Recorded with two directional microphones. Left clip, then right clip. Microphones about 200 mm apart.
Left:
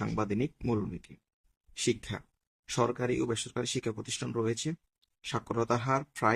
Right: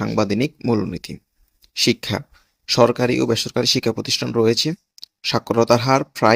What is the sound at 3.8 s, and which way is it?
Speech, 25° right (ahead or behind).